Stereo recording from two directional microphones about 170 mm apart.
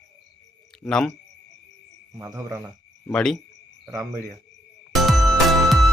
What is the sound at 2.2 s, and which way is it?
Speech, 15° right (ahead or behind).